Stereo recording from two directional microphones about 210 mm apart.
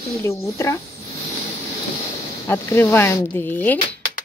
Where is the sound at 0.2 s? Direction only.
15° left (ahead or behind).